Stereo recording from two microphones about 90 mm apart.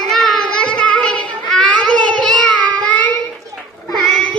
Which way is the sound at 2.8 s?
15° left (ahead or behind).